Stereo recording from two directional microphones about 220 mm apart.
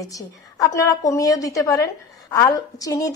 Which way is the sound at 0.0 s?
15° left (ahead or behind).